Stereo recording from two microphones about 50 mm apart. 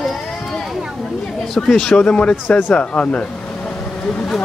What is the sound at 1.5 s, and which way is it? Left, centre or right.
Speech, centre.